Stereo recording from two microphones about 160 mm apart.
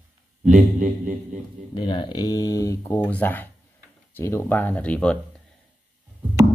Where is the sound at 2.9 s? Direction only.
10° left (ahead or behind).